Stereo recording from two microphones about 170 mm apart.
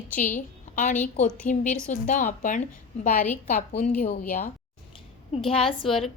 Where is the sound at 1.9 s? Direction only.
50° left (ahead or behind).